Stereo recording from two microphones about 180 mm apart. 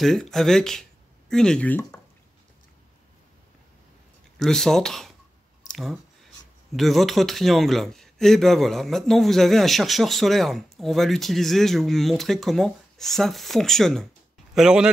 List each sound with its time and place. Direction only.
0.0 s speech: centre (ahead or behind)
4.4 s a man's voice: centre (ahead or behind)